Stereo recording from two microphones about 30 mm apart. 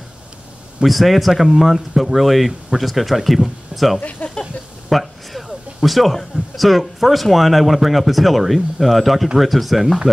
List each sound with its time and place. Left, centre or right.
0.8 s speech: centre
4.2 s speech: left
4.8 s a sound: centre
6.3 s speech: centre